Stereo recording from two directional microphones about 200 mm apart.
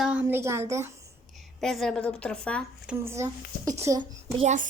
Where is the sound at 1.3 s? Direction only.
Centre (ahead or behind).